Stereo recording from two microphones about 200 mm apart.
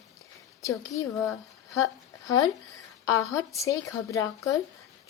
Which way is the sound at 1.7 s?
15° left (ahead or behind).